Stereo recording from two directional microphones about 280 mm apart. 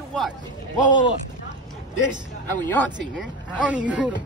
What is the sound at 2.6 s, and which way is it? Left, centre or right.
Speech, centre.